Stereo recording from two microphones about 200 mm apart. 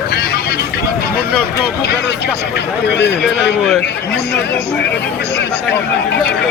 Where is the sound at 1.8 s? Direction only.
55° left (ahead or behind).